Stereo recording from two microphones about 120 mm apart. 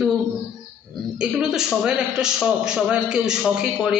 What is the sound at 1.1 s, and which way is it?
A man's voice, 5° right (ahead or behind).